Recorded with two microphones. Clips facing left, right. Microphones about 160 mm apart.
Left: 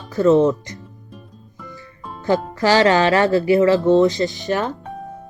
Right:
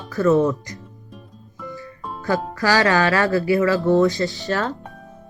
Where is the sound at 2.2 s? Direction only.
20° left (ahead or behind).